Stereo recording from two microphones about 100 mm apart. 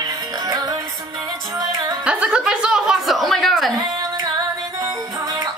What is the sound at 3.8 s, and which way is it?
Female singing, 45° right (ahead or behind).